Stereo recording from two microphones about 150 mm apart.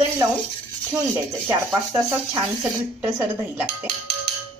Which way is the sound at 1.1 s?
15° right (ahead or behind).